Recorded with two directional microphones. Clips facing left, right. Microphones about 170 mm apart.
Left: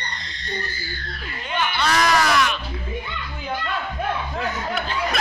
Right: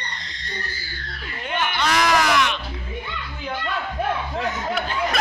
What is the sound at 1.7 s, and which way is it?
Music, 15° right (ahead or behind).